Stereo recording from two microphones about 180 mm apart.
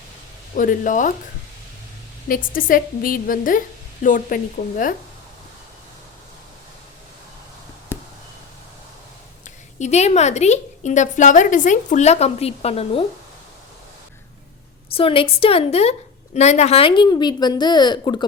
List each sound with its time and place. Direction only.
0.5 s a woman's voice: 50° left (ahead or behind)
2.2 s a woman's voice: 50° left (ahead or behind)
7.9 s a sound: 10° left (ahead or behind)
9.7 s a woman's voice: 40° left (ahead or behind)
14.9 s a woman's voice: 30° left (ahead or behind)